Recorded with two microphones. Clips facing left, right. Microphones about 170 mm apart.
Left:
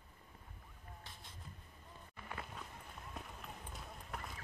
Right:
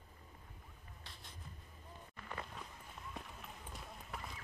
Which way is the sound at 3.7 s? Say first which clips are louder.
Right 1 dB; centre (ahead or behind).